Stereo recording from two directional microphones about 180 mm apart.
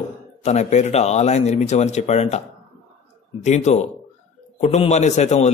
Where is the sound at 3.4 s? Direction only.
40° left (ahead or behind).